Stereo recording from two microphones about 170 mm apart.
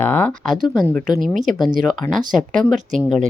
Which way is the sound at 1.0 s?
55° right (ahead or behind).